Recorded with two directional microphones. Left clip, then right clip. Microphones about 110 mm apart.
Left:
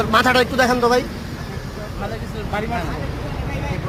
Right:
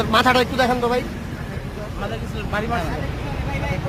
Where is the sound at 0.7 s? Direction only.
35° left (ahead or behind).